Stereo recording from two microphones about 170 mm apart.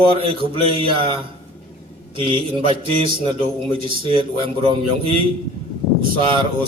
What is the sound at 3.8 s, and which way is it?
A man's voice, 30° right (ahead or behind).